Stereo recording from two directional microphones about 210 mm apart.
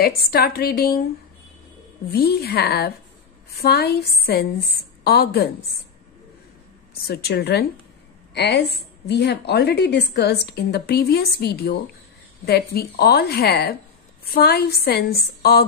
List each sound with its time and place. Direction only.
0.3 s a woman's voice: 45° left (ahead or behind)
2.0 s a woman's voice: 50° left (ahead or behind)
7.1 s a woman's voice: 50° left (ahead or behind)